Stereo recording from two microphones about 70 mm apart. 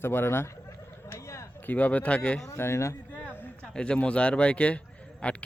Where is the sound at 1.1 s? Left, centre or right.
Left.